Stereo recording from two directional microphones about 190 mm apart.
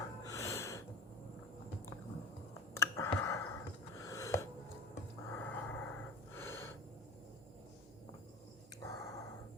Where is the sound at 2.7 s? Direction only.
15° left (ahead or behind).